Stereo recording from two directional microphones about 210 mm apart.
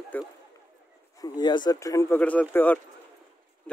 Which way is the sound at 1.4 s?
20° left (ahead or behind).